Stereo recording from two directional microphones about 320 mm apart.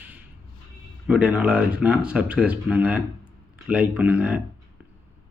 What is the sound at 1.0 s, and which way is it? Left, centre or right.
Speech, centre.